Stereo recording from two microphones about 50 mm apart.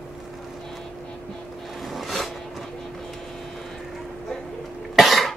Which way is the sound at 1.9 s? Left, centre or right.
Centre.